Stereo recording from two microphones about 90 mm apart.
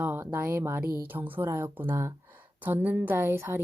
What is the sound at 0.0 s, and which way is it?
A woman's voice, 20° right (ahead or behind).